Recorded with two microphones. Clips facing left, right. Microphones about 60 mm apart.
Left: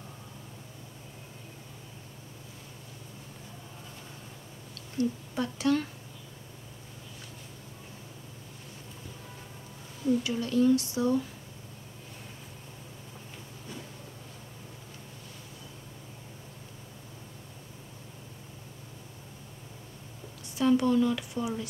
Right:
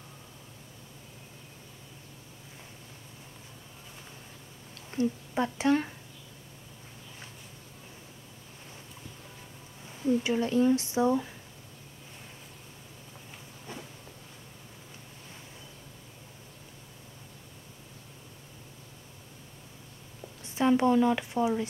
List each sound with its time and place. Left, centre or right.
4.7 s speech: right
10.2 s speech: right
20.5 s speech: right